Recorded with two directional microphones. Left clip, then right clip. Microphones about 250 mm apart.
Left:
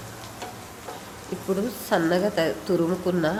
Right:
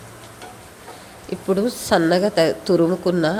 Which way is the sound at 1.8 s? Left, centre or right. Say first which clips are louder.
Right 5 dB; right.